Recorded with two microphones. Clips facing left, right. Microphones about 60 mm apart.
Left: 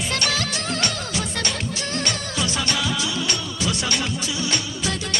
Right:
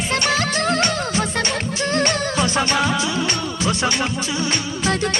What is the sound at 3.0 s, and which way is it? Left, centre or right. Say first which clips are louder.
Music of bollywood: right 4 dB; right.